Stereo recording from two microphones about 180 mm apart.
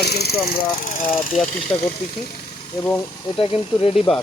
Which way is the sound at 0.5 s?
50° left (ahead or behind).